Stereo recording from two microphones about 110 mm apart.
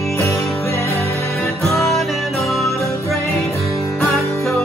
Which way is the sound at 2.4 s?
25° left (ahead or behind).